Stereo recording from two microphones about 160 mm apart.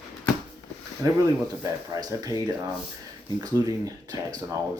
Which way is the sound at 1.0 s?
20° right (ahead or behind).